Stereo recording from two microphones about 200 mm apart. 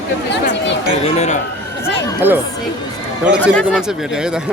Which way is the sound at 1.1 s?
35° left (ahead or behind).